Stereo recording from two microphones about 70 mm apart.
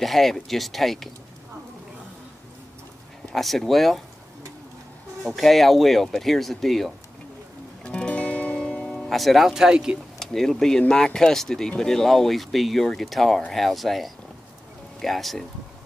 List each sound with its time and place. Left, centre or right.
0.0 s speech: centre
3.3 s speech: centre
5.2 s speech: centre
7.8 s music: centre
9.1 s speech: centre
10.1 s speech: centre